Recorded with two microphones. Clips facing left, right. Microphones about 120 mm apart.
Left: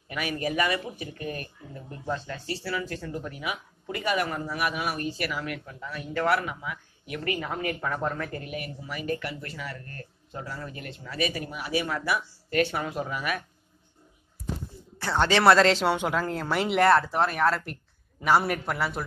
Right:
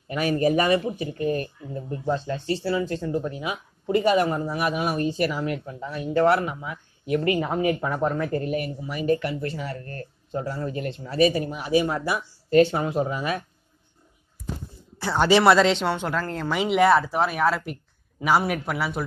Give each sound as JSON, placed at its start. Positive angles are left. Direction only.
{"t": 0.1, "sound": "speech", "side_deg": -35}
{"t": 7.5, "sound": "speech", "side_deg": -15}
{"t": 8.3, "sound": "speech", "side_deg": -35}
{"t": 8.8, "sound": "speech", "side_deg": -25}
{"t": 15.0, "sound": "a man's voice", "side_deg": -10}